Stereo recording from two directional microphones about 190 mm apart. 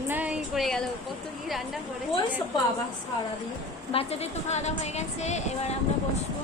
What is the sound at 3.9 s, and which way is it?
Speech, 35° left (ahead or behind).